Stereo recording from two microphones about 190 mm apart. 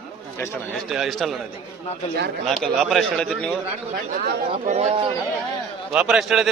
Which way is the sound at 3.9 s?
50° right (ahead or behind).